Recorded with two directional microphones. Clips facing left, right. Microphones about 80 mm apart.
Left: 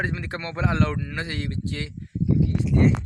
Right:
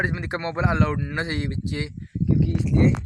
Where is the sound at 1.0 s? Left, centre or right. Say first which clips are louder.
Right 3 dB; right.